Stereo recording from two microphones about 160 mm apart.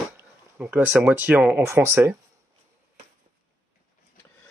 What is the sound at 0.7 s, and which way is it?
Speech, centre (ahead or behind).